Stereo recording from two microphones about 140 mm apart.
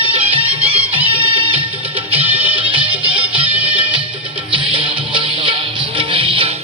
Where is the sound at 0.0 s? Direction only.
40° right (ahead or behind).